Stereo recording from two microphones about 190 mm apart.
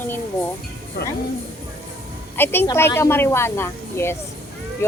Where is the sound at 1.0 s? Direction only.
60° left (ahead or behind).